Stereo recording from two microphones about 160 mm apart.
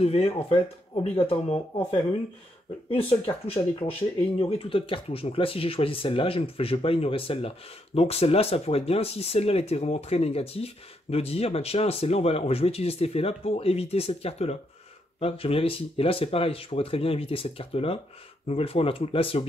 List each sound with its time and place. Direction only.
0.0 s speech: 40° left (ahead or behind)
4.4 s speech: 40° left (ahead or behind)